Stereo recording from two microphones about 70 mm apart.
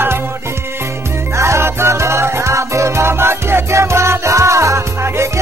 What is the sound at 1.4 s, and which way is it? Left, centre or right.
Music, right.